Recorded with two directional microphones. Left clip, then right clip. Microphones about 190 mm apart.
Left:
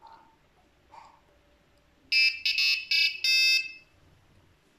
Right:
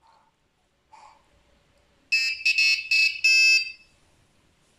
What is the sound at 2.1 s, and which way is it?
Alarm, 25° left (ahead or behind).